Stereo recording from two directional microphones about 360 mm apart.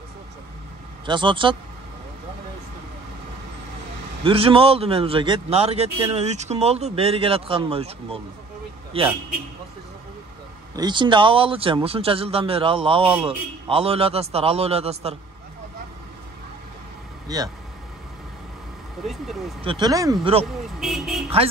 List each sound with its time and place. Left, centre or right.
1.0 s speech: centre
4.2 s speech: centre
10.8 s speech: centre
19.6 s speech: centre
20.8 s speech: centre